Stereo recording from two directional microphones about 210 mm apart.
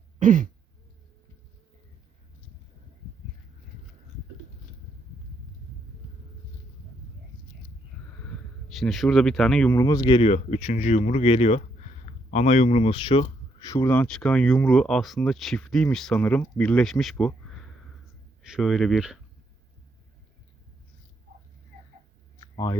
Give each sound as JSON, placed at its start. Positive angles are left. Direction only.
{"t": 0.2, "sound": "throat clearing", "side_deg": -40}
{"t": 8.3, "sound": "speech", "side_deg": 0}
{"t": 9.7, "sound": "speech", "side_deg": 15}
{"t": 22.4, "sound": "a sound", "side_deg": 15}